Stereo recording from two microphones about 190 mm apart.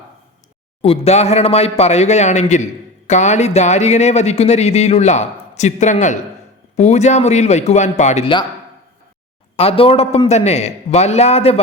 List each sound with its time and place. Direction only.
0.8 s speech: 30° left (ahead or behind)
9.6 s speech: 30° left (ahead or behind)